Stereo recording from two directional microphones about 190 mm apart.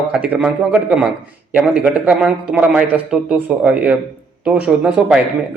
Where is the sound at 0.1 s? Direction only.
5° right (ahead or behind).